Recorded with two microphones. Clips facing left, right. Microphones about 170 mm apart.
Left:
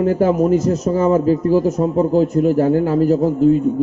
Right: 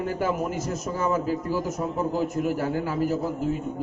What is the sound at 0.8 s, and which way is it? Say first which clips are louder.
A man's voice: left 8 dB; 50° left (ahead or behind).